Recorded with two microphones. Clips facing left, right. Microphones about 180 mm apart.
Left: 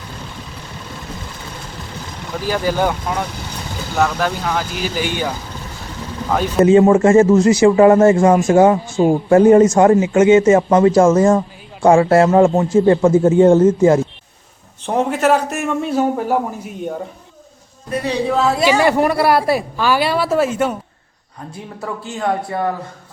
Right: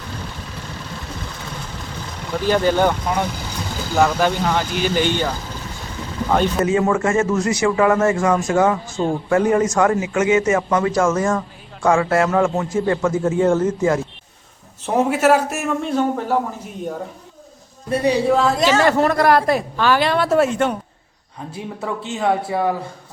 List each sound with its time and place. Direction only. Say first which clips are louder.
2.5 s a woman's voice: right 2 dB; 5° left (ahead or behind)
6.3 s speech: left 3 dB; centre (ahead or behind)
6.7 s a man's voice: left 8 dB; 25° left (ahead or behind)
14.8 s speech: even; 5° right (ahead or behind)
15.8 s a woman's voice: left 3 dB; 5° left (ahead or behind)
18.3 s a woman's voice: left 5 dB; 5° left (ahead or behind)
21.8 s speech: even; 5° right (ahead or behind)